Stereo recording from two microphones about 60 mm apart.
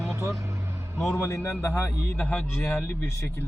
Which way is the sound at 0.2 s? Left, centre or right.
Right.